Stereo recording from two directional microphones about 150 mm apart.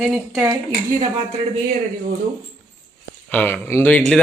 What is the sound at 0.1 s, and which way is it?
Speech, 5° right (ahead or behind).